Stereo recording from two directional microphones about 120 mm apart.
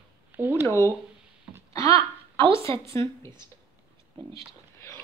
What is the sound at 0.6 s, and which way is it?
Speech, 20° left (ahead or behind).